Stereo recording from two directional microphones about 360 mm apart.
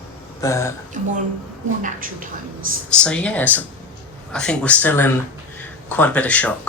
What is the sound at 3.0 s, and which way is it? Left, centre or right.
Speech, centre.